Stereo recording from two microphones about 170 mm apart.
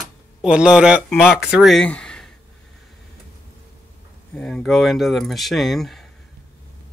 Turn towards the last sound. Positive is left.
turn(degrees=0)  # may be behind; listen again after turning